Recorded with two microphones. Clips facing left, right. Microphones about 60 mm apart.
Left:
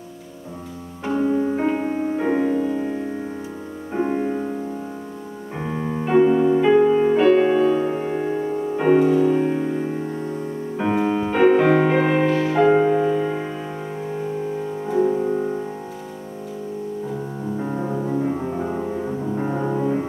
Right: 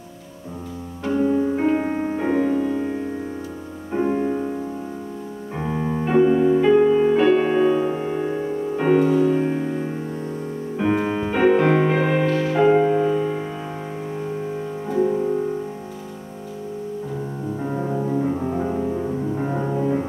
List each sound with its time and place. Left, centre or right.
1.0 s music: centre
1.8 s music: centre
2.1 s music: centre
3.9 s music: centre
5.6 s music: centre
7.2 s music: centre
7.9 s music: centre
14.9 s music: centre
17.6 s music: centre